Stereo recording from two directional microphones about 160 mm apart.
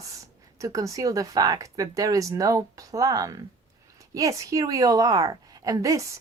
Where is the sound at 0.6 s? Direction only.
20° right (ahead or behind).